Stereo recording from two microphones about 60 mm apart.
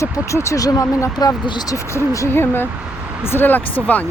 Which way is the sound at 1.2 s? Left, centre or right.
Left.